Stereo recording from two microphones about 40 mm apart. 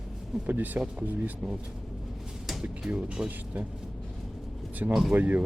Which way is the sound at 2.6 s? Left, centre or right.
Right.